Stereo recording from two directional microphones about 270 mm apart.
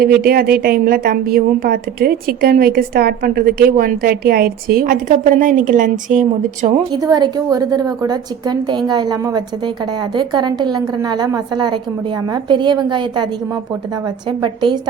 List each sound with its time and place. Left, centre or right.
0.0 s a woman's voice: right
6.9 s a woman's voice: centre
14.3 s a woman's voice: centre